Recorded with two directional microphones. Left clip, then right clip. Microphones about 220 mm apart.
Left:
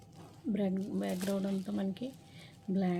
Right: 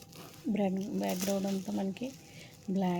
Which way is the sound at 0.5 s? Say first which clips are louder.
Right 2 dB; 5° right (ahead or behind).